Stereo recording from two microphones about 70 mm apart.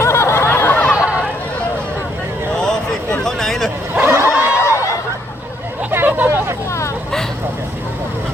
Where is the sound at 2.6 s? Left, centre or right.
Centre.